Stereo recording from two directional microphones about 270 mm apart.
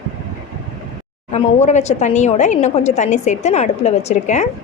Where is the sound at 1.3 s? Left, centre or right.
Left.